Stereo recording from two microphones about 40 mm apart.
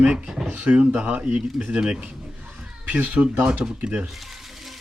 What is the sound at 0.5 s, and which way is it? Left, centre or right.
Speech, right.